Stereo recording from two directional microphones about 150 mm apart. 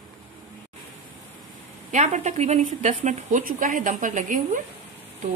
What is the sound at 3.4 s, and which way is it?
A woman's voice, 60° right (ahead or behind).